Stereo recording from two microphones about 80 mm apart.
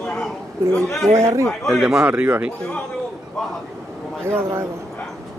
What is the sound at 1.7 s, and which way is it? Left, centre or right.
Speech, centre.